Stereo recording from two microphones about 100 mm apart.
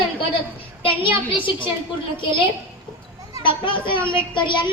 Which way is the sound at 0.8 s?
60° left (ahead or behind).